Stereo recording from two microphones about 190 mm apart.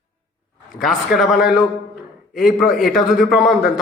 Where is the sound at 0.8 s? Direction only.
Centre (ahead or behind).